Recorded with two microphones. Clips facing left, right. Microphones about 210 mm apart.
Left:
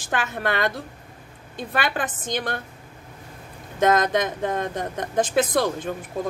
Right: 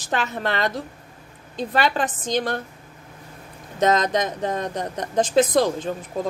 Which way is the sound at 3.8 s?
50° left (ahead or behind).